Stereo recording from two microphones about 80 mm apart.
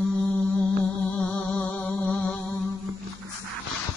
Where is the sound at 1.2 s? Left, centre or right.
Centre.